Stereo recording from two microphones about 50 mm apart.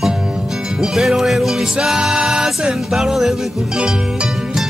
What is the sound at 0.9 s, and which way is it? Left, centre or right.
Music, centre.